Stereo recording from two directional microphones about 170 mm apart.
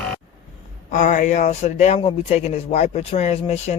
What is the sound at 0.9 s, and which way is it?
Speech, 50° left (ahead or behind).